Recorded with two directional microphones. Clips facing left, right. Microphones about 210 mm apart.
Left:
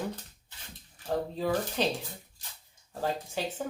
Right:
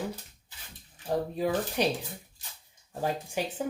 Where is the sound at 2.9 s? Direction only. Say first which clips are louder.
Right 1 dB; 15° right (ahead or behind).